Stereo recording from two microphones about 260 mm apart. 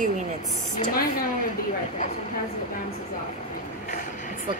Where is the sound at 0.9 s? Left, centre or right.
Left.